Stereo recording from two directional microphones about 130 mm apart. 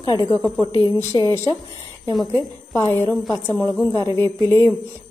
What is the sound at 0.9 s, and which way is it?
Speech, 20° left (ahead or behind).